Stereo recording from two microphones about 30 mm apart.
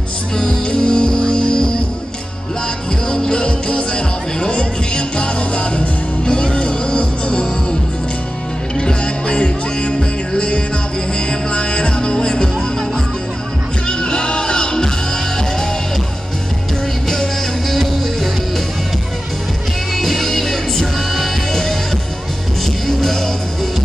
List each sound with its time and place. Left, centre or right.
0.7 s music: left
3.1 s music: left
8.7 s music: left
13.8 s music: left
17.1 s music: centre
20.0 s music: centre
22.8 s music: centre